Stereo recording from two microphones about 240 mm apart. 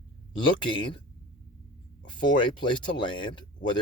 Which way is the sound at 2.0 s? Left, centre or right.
Centre.